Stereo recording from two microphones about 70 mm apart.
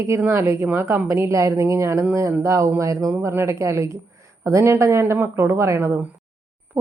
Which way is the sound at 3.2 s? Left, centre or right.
Right.